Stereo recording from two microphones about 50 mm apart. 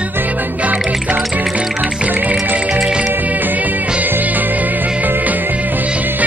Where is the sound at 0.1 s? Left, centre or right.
Right.